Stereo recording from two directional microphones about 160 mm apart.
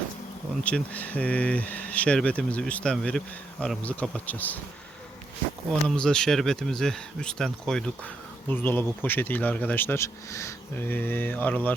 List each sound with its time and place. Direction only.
0.6 s speech: 10° left (ahead or behind)
5.9 s speech: 5° left (ahead or behind)